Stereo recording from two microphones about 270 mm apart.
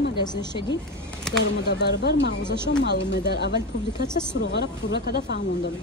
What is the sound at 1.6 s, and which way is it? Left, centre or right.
Speech, left.